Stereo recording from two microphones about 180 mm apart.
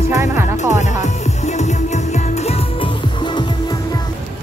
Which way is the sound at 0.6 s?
40° left (ahead or behind).